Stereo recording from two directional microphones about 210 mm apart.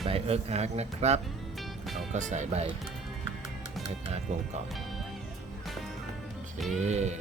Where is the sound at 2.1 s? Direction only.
35° right (ahead or behind).